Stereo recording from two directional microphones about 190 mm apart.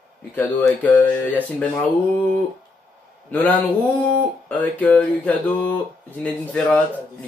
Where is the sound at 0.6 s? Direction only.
5° left (ahead or behind).